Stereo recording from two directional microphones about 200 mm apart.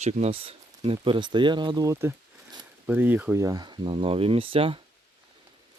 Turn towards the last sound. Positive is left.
turn(degrees=-25)  # may be behind; listen again after turning